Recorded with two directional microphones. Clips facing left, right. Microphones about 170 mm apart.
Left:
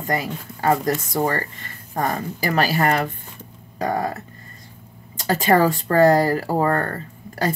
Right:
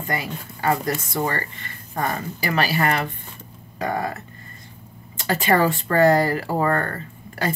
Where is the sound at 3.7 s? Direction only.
40° left (ahead or behind).